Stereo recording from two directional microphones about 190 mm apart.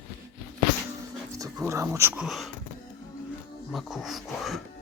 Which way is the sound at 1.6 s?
15° right (ahead or behind).